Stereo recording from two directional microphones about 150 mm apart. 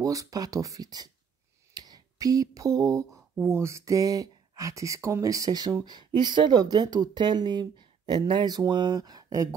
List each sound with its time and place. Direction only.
0.0 s speech: 20° right (ahead or behind)